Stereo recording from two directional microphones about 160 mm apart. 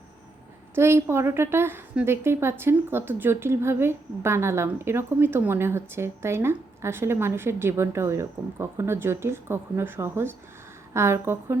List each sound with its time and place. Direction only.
0.8 s a woman's voice: 15° right (ahead or behind)